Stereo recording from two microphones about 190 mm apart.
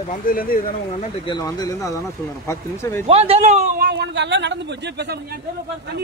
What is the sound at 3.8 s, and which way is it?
Speech, 65° right (ahead or behind).